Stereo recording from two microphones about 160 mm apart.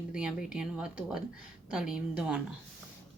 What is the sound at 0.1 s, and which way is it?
Speech, 5° right (ahead or behind).